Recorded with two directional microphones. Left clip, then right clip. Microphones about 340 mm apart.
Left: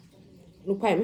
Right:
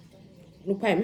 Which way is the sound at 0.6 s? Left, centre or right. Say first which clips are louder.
Left 1 dB; centre.